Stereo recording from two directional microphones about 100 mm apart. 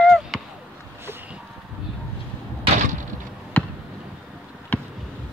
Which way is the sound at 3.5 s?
20° left (ahead or behind).